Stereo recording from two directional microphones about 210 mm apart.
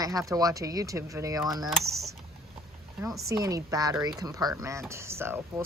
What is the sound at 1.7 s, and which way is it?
Speech, centre (ahead or behind).